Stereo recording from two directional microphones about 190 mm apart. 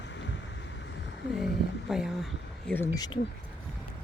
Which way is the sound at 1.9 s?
Centre (ahead or behind).